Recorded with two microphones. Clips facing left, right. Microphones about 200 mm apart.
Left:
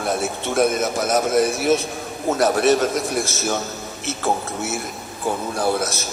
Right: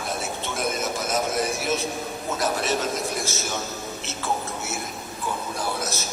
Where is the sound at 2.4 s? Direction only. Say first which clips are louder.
Left 9 dB; 60° left (ahead or behind).